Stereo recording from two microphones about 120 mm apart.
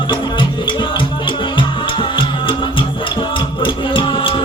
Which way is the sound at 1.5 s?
45° left (ahead or behind).